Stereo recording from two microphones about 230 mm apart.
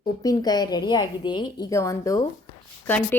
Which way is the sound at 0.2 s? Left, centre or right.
Centre.